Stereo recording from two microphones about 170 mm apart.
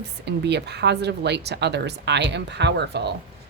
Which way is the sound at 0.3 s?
80° right.